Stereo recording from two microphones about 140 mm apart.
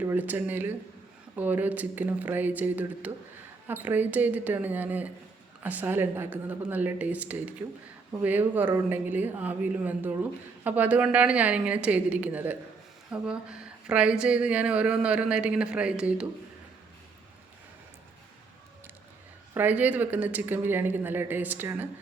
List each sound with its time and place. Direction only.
0.0 s a woman's voice: 15° right (ahead or behind)
19.5 s a woman's voice: 10° right (ahead or behind)